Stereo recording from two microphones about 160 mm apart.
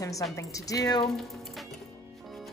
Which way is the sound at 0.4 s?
20° left (ahead or behind).